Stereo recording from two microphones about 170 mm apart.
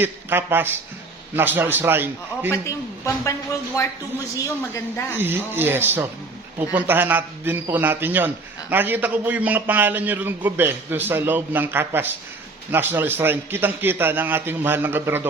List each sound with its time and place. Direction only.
0.0 s a man's voice: 10° right (ahead or behind)
2.5 s speech: 15° left (ahead or behind)
5.1 s a man's voice: 10° right (ahead or behind)